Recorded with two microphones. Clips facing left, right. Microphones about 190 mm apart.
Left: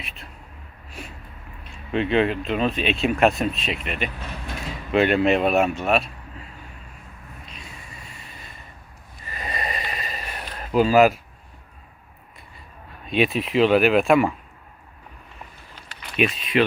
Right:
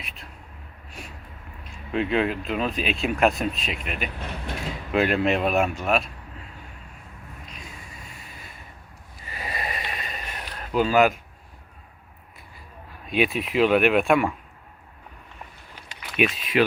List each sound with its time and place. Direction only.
1.9 s speech: centre (ahead or behind)
7.4 s a sound: centre (ahead or behind)
9.3 s sniff: 5° right (ahead or behind)
13.1 s speech: centre (ahead or behind)
16.1 s speech: 5° right (ahead or behind)